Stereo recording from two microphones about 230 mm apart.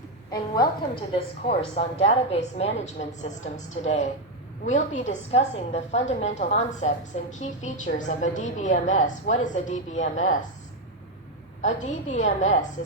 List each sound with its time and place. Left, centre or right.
0.3 s a woman's voice: centre
11.6 s a woman's voice: left